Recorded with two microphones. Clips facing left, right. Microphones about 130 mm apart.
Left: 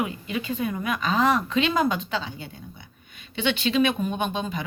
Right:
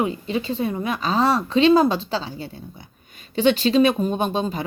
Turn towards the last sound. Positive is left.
turn(degrees=-35)  # may be behind; listen again after turning